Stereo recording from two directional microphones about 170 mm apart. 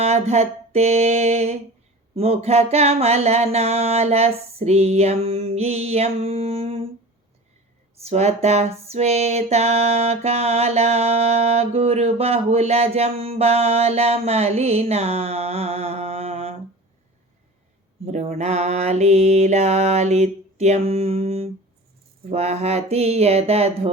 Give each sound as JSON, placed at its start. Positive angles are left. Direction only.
{"t": 0.0, "sound": "music", "side_deg": -40}
{"t": 7.9, "sound": "speech", "side_deg": -40}
{"t": 8.9, "sound": "music", "side_deg": -40}
{"t": 18.0, "sound": "music", "side_deg": -40}